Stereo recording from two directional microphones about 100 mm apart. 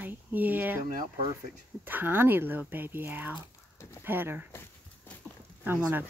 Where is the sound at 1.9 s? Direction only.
20° right (ahead or behind).